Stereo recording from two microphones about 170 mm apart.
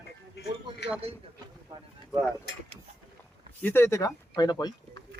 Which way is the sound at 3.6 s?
15° left (ahead or behind).